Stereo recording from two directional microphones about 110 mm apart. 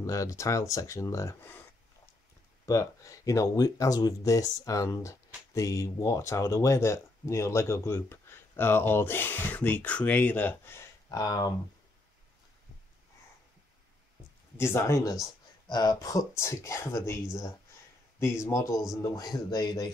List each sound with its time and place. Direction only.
0.0 s speech: 30° left (ahead or behind)
2.6 s speech: 30° left (ahead or behind)
11.1 s speech: 35° left (ahead or behind)
14.6 s speech: 25° left (ahead or behind)
15.7 s speech: 40° left (ahead or behind)